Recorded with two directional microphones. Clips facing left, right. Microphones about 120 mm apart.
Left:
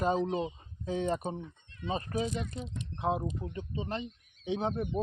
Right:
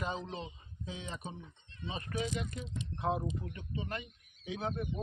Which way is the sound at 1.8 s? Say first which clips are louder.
Left 5 dB; 35° left (ahead or behind).